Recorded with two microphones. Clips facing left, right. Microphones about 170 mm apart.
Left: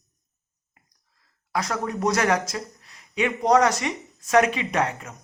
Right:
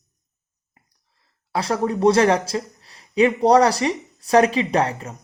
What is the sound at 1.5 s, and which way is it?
Speech, 30° right (ahead or behind).